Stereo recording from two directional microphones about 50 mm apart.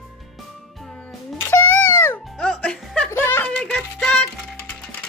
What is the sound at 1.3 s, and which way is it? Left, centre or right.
Music, left.